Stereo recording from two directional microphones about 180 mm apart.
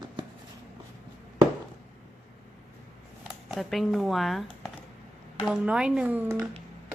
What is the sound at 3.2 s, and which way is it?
Speech, centre (ahead or behind).